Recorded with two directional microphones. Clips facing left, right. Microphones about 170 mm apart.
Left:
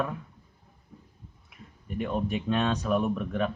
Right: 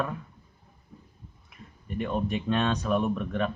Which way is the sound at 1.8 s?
10° left (ahead or behind).